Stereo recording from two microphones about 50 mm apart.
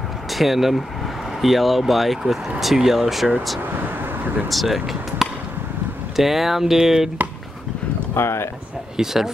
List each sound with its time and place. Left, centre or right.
0.3 s speech: centre
3.8 s vehicle: right
4.5 s speech: centre
8.1 s speech: left
8.9 s speech: centre